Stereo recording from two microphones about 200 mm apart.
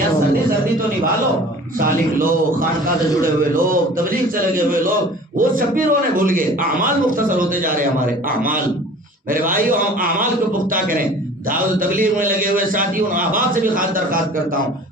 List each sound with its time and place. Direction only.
1.8 s a man's voice: 45° right (ahead or behind)
9.3 s a man's voice: 45° right (ahead or behind)
11.8 s a man's voice: 45° right (ahead or behind)